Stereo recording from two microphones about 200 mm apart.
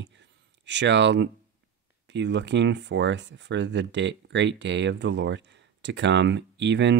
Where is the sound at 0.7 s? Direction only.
60° right (ahead or behind).